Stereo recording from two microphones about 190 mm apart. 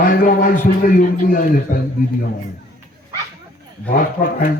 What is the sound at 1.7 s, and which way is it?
Speech, 50° left (ahead or behind).